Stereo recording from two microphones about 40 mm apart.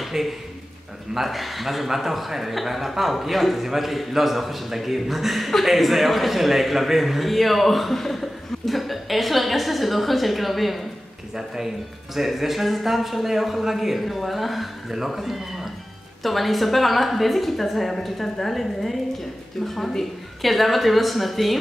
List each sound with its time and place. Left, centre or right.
0.0 s a sound: centre
1.1 s a man's voice: centre
11.3 s a man's voice: centre